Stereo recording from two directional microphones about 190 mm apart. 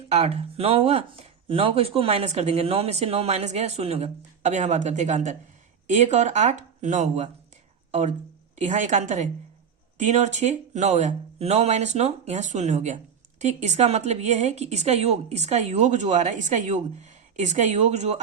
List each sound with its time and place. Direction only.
0.1 s speech: 35° right (ahead or behind)